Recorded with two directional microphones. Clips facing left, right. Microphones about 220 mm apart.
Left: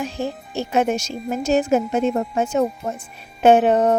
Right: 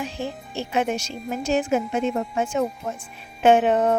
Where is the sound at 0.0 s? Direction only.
45° left (ahead or behind).